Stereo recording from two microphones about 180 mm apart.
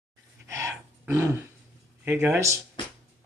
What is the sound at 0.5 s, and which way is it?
Dog, 15° right (ahead or behind).